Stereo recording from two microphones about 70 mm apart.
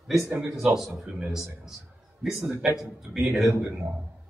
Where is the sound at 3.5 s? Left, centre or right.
Right.